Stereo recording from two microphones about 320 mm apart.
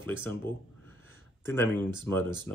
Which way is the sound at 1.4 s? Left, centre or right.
Centre.